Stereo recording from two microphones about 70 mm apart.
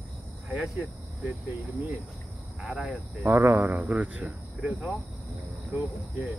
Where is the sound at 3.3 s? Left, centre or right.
Right.